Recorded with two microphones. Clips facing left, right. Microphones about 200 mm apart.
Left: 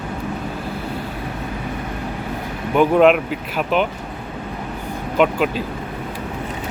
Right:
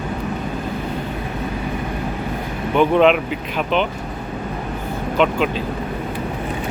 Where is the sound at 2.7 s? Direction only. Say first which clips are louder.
Left 1 dB; 5° left (ahead or behind).